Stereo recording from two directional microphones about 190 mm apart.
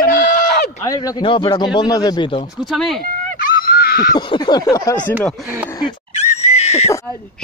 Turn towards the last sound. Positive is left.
turn(degrees=15)  # may be behind; listen again after turning